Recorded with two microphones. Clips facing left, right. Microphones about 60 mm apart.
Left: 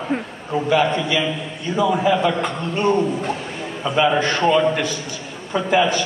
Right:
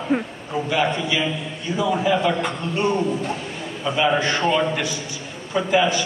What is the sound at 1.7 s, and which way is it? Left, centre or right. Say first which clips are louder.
A man's voice: left 3 dB; left.